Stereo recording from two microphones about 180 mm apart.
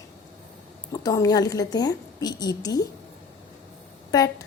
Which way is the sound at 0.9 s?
20° left (ahead or behind).